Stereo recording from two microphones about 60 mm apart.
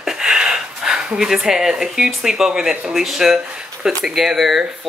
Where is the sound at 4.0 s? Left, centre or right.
Centre.